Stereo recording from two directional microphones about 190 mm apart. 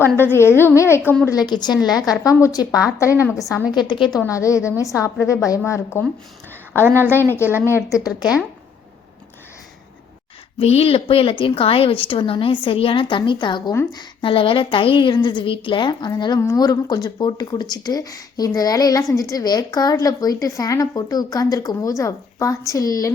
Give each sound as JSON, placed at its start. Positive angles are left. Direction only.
{"t": 0.0, "sound": "a woman's voice", "side_deg": 10}
{"t": 1.4, "sound": "a woman's voice", "side_deg": 20}
{"t": 6.7, "sound": "a woman's voice", "side_deg": -10}
{"t": 7.1, "sound": "a woman's voice", "side_deg": 10}
{"t": 7.4, "sound": "a woman's voice", "side_deg": -10}
{"t": 7.9, "sound": "a woman's voice", "side_deg": 15}
{"t": 10.6, "sound": "a woman's voice", "side_deg": 30}